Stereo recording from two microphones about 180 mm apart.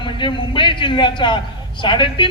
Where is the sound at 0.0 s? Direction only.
25° left (ahead or behind).